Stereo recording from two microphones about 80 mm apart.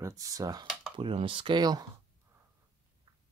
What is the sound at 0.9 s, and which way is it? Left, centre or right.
Speech, right.